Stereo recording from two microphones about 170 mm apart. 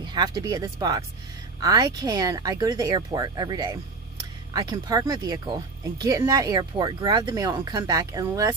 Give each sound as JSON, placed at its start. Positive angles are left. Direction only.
{"t": 0.0, "sound": "speech", "side_deg": -25}